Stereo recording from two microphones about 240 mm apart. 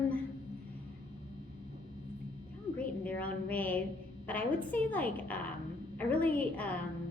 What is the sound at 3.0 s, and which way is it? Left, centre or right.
A woman's voice, centre.